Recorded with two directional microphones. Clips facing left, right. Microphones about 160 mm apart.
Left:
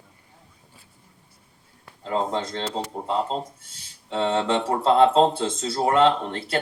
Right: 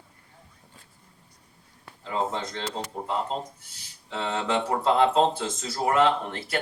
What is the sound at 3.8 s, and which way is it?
Speech, 30° left (ahead or behind).